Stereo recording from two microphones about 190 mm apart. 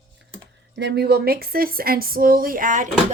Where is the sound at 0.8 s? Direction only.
60° right (ahead or behind); by 2.8 s 45° right (ahead or behind).